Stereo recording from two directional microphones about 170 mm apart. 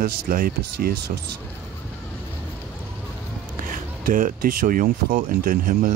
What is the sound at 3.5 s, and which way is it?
Speech, 55° right (ahead or behind).